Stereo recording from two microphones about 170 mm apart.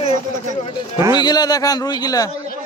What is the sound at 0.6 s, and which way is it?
A man's voice, 30° left (ahead or behind).